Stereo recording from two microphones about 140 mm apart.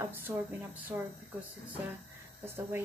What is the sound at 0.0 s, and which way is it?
Speech, 15° right (ahead or behind).